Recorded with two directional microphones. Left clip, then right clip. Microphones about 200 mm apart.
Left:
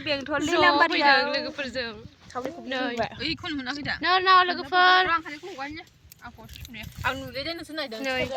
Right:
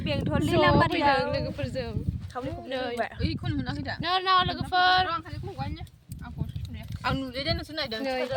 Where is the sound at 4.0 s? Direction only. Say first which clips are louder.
Left 5 dB; 20° left (ahead or behind).